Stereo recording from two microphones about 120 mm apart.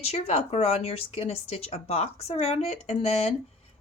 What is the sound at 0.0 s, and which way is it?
A woman's voice, 60° left (ahead or behind).